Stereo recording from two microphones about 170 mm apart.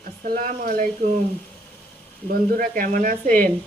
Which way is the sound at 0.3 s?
55° right (ahead or behind).